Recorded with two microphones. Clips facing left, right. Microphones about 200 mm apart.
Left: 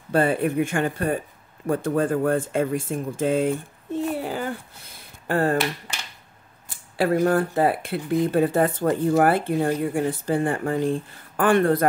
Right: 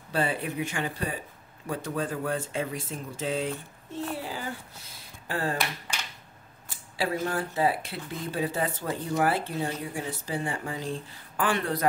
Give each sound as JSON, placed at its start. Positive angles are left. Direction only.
{"t": 0.1, "sound": "speech", "side_deg": 50}
{"t": 4.2, "sound": "a sound", "side_deg": 55}
{"t": 7.0, "sound": "speech", "side_deg": 55}